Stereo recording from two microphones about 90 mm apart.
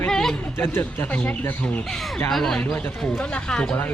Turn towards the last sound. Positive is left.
turn(degrees=10)  # may be behind; listen again after turning